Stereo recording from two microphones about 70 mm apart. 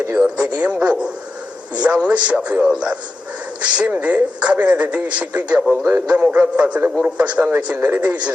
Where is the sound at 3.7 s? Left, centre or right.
Centre.